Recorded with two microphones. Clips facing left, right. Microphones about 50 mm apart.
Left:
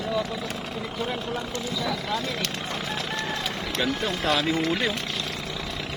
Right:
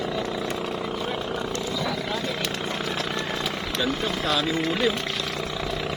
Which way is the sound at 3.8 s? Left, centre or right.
Left.